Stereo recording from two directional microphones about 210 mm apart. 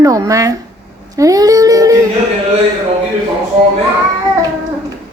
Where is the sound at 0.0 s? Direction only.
15° right (ahead or behind).